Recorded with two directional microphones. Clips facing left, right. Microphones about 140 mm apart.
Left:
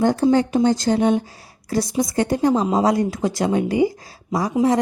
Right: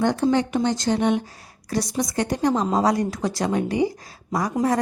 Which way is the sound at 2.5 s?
5° left (ahead or behind).